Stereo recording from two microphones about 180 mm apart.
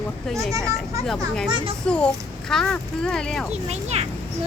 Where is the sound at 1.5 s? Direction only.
30° right (ahead or behind).